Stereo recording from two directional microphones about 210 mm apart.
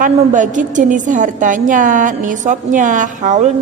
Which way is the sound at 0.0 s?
35° right (ahead or behind).